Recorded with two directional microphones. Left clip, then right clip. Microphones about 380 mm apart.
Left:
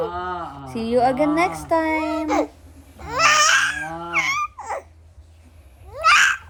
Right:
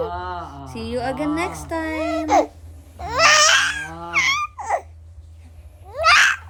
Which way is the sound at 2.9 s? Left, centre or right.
Centre.